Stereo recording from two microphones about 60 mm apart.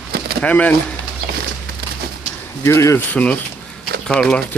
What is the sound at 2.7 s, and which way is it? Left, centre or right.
Speech, left.